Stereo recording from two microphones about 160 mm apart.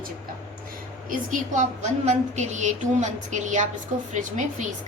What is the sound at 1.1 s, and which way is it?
A woman's voice, 55° right (ahead or behind).